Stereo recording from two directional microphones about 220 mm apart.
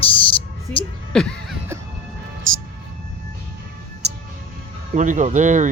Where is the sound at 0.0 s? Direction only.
25° left (ahead or behind).